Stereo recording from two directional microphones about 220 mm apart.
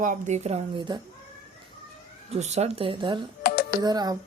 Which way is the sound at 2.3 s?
30° right (ahead or behind).